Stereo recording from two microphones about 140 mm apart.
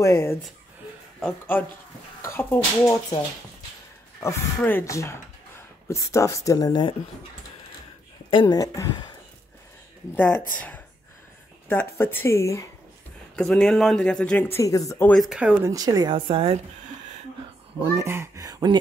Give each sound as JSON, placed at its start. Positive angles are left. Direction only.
{"t": 0.0, "sound": "speech", "side_deg": 20}
{"t": 2.2, "sound": "speech", "side_deg": 15}
{"t": 8.3, "sound": "speech", "side_deg": 35}
{"t": 10.1, "sound": "speech", "side_deg": 15}
{"t": 11.7, "sound": "speech", "side_deg": 15}
{"t": 13.4, "sound": "speech", "side_deg": 5}
{"t": 15.0, "sound": "speech", "side_deg": 0}
{"t": 15.6, "sound": "speech", "side_deg": -25}
{"t": 17.9, "sound": "speech", "side_deg": -20}